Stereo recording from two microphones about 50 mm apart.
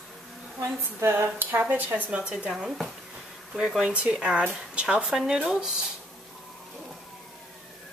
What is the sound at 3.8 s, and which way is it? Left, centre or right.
Speech, right.